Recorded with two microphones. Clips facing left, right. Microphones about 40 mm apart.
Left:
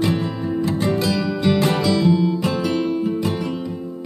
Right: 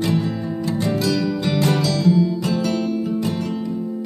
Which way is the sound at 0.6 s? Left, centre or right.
Left.